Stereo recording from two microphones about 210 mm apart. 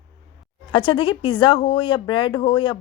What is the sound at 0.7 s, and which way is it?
Speech, 25° left (ahead or behind).